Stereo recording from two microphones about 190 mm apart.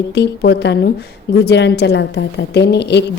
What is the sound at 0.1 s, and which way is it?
A woman's voice, 60° left (ahead or behind).